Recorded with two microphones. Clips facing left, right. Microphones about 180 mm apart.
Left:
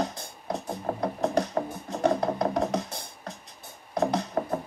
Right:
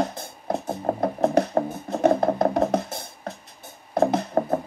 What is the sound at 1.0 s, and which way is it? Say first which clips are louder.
Music: right 5 dB; 55° right (ahead or behind).